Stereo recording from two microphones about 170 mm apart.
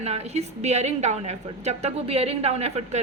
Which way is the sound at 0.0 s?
40° right (ahead or behind).